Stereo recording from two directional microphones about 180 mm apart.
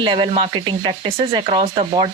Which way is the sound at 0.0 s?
25° right (ahead or behind).